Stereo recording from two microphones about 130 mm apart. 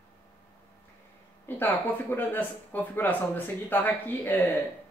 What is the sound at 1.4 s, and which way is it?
Speech, 15° left (ahead or behind).